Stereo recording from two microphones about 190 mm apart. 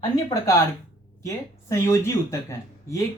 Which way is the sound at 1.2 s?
15° left (ahead or behind).